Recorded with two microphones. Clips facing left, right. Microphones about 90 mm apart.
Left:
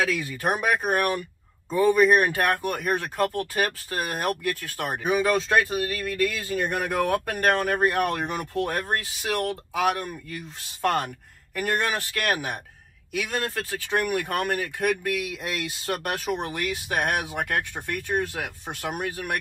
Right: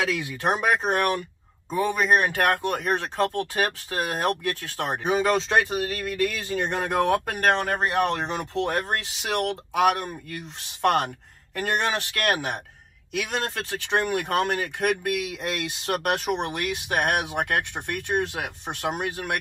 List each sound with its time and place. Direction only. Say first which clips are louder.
0.0 s speech: even; 20° right (ahead or behind)